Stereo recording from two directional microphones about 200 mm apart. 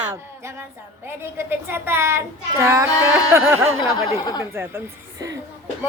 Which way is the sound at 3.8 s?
20° left (ahead or behind).